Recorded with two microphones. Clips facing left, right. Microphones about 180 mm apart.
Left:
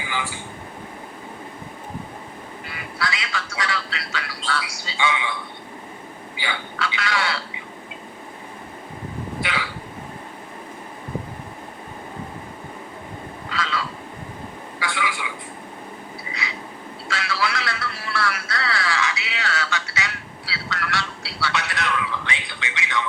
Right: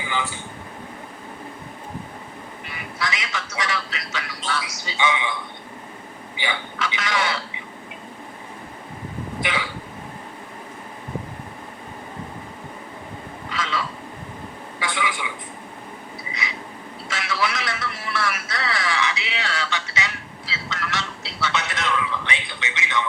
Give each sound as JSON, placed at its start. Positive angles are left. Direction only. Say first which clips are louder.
{"t": 2.6, "sound": "speech", "louder": "even", "side_deg": -20}
{"t": 6.3, "sound": "speech", "louder": "right 2 dB", "side_deg": -20}
{"t": 9.4, "sound": "hiccup", "louder": "right 2 dB", "side_deg": -20}
{"t": 13.5, "sound": "frog", "louder": "even", "side_deg": -20}
{"t": 14.8, "sound": "a sound", "louder": "right 1 dB", "side_deg": -20}
{"t": 16.3, "sound": "vehicle", "louder": "right 1 dB", "side_deg": -20}
{"t": 17.1, "sound": "a sound", "louder": "even", "side_deg": -20}